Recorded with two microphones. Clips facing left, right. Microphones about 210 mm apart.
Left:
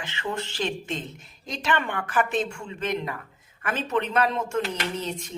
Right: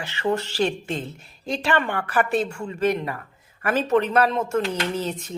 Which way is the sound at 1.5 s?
35° right (ahead or behind).